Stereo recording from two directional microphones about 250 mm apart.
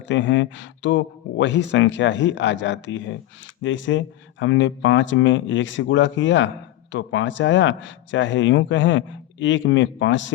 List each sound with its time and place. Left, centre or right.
0.0 s speech: left